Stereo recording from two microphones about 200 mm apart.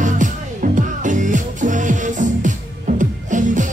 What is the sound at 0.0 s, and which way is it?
Music, 40° right (ahead or behind).